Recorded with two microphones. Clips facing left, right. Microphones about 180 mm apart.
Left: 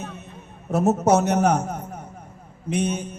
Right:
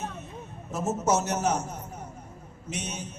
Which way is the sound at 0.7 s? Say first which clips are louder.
Left 8 dB; 60° left (ahead or behind).